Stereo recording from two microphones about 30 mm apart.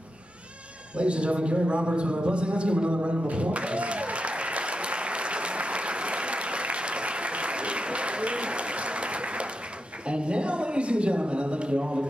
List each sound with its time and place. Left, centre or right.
0.9 s a woman's voice: right
3.0 s applause: right
10.0 s a woman's voice: right